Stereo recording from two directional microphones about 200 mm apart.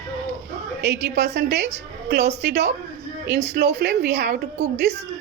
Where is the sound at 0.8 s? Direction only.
55° right (ahead or behind).